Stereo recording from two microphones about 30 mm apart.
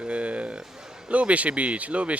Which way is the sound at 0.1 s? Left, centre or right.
Right.